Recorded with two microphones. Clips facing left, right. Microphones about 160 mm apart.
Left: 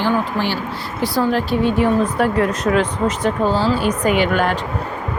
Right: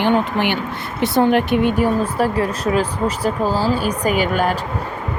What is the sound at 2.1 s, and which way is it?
Speech, 30° right (ahead or behind).